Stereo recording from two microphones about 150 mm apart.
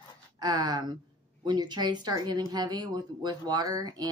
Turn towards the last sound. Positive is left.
turn(degrees=-25)  # may be behind; listen again after turning